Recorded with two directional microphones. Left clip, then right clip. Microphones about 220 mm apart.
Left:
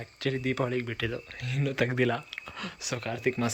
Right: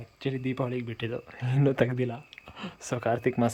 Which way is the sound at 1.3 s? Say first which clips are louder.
Right 6 dB; 20° right (ahead or behind).